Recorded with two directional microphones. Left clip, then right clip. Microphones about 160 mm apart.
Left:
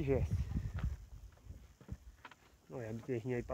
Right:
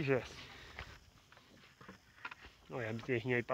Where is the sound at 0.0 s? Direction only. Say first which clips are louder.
Right 1 dB; 20° left (ahead or behind).